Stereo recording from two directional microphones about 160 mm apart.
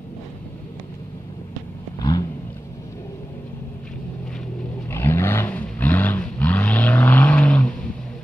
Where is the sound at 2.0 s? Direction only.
25° left (ahead or behind).